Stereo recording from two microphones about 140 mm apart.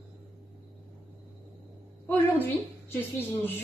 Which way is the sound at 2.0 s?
15° left (ahead or behind).